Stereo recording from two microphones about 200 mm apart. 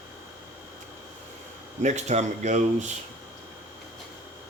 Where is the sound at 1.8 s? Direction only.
35° right (ahead or behind).